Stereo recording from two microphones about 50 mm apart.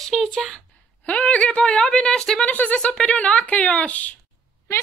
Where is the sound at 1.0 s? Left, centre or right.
Left.